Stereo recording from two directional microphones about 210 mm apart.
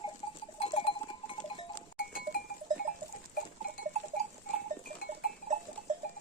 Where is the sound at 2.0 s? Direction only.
45° left (ahead or behind).